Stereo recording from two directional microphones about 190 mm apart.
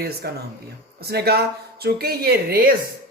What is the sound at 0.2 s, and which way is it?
A woman's voice, 55° right (ahead or behind).